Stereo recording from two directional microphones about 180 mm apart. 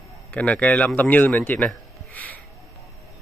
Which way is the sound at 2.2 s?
10° left (ahead or behind).